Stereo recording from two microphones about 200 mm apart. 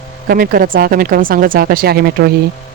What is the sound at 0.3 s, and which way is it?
A man's voice, 45° right (ahead or behind).